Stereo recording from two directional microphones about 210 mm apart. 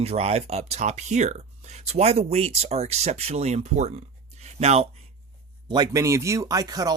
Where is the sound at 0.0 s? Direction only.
30° right (ahead or behind).